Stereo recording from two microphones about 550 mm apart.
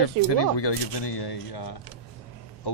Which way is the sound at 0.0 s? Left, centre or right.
Left.